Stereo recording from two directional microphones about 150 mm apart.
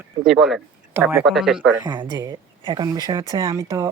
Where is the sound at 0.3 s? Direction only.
5° right (ahead or behind).